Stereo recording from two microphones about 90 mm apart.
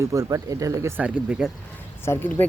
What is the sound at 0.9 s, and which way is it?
Speech, 15° right (ahead or behind).